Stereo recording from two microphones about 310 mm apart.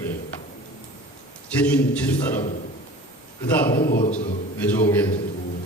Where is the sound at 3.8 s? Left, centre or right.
Left.